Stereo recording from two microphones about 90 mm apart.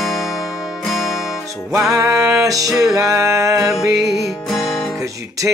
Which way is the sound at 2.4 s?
40° right (ahead or behind).